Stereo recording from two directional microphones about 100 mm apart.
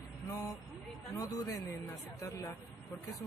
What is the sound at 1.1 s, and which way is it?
Speech, 35° left (ahead or behind).